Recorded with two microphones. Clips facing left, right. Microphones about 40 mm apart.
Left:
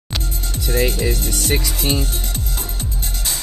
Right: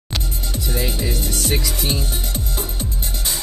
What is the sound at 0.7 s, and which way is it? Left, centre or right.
Speech, centre.